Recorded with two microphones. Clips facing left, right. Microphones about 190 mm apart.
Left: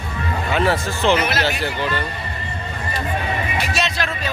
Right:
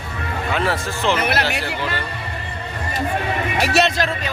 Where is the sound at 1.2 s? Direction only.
60° right (ahead or behind).